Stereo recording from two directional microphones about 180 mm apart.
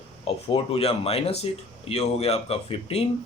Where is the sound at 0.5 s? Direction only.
35° left (ahead or behind).